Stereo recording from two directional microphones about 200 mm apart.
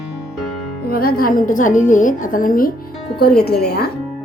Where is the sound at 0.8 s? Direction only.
50° left (ahead or behind).